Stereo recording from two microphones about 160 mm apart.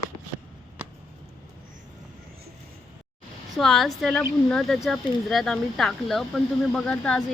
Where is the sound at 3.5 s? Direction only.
Centre (ahead or behind).